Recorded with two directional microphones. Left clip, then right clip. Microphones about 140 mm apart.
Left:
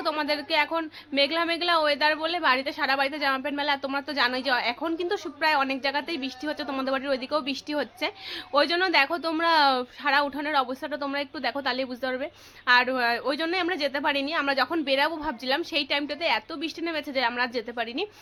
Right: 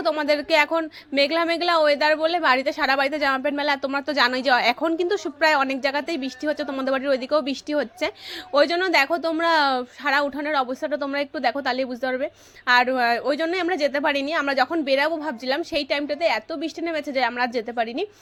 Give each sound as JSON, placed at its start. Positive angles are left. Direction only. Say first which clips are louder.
{"t": 0.0, "sound": "a woman's voice", "louder": "right 5 dB", "side_deg": -35}